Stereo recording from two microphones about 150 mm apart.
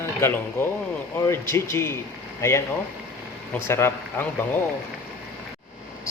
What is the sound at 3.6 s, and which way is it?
Speech, 15° left (ahead or behind).